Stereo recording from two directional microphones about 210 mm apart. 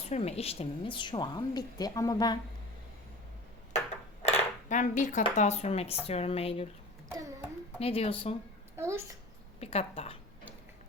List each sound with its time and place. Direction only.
0.0 s a woman's voice: 30° left (ahead or behind)
4.2 s dishes: 35° left (ahead or behind)
5.2 s a woman's voice: 30° left (ahead or behind)
7.1 s a sound: 15° right (ahead or behind)
7.8 s a woman's voice: 30° left (ahead or behind)
8.7 s a child's voice: 10° right (ahead or behind)
9.6 s a woman's voice: 30° left (ahead or behind)